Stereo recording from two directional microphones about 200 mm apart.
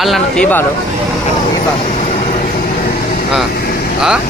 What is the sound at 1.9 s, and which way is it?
Vehicle, 35° left (ahead or behind).